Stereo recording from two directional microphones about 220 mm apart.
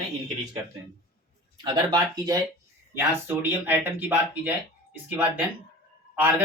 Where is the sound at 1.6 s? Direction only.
20° right (ahead or behind).